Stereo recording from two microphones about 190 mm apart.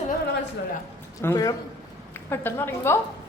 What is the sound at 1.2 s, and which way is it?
A woman's voice, 15° left (ahead or behind).